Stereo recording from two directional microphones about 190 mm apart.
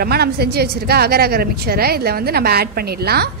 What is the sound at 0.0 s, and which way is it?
A woman's voice, 55° right (ahead or behind).